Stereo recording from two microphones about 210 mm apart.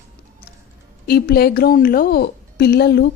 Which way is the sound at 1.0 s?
45° left (ahead or behind).